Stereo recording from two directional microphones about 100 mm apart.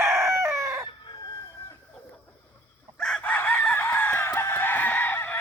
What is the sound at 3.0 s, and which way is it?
Chicken, 5° left (ahead or behind).